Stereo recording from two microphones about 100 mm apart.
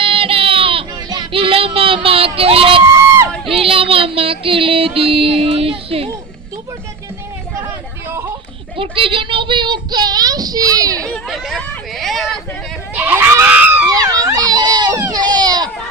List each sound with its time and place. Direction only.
0.0 s sheep: 65° right (ahead or behind)
1.3 s child singing: 65° right (ahead or behind)
8.0 s speech: 25° right (ahead or behind)
8.7 s speech: 60° right (ahead or behind); by 11.0 s 35° right (ahead or behind)
11.3 s speech: centre (ahead or behind)
12.9 s speech: 15° right (ahead or behind)
13.5 s a sound: 15° right (ahead or behind)
13.8 s a sound: 40° right (ahead or behind)
15.1 s baby cry: 45° right (ahead or behind)